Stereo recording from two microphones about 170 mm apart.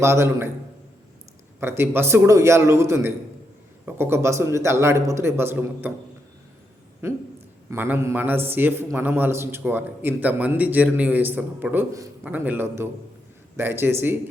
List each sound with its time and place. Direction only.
0.0 s a man's voice: 15° right (ahead or behind)
1.6 s a man's voice: 15° right (ahead or behind)
7.0 s a man's voice: 15° right (ahead or behind)